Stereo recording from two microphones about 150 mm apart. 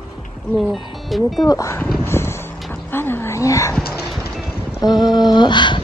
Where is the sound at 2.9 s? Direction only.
15° left (ahead or behind).